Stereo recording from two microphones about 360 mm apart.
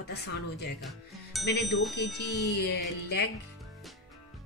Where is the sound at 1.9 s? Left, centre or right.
Left.